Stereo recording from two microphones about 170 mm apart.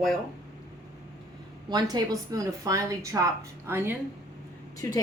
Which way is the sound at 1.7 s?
20° right (ahead or behind).